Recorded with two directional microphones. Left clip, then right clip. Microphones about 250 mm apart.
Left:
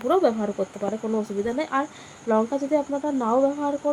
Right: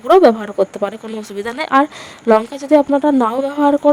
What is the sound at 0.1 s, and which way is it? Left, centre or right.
Speech, right.